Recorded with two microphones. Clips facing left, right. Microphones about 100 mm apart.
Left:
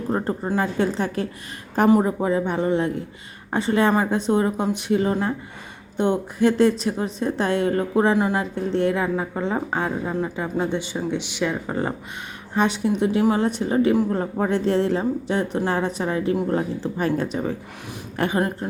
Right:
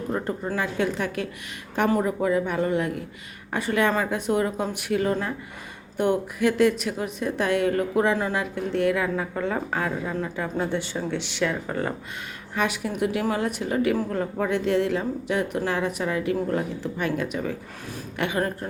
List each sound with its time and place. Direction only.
0.1 s a woman's voice: 30° left (ahead or behind)
18.3 s a woman's voice: 20° left (ahead or behind)